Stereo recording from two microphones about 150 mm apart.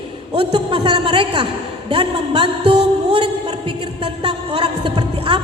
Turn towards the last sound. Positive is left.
turn(degrees=-35)  # may be behind; listen again after turning